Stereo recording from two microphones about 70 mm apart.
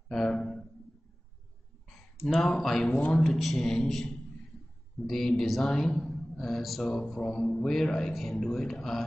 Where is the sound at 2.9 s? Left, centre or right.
Left.